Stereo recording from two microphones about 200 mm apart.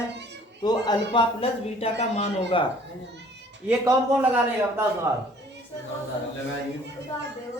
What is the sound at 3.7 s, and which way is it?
A man's voice, 10° right (ahead or behind).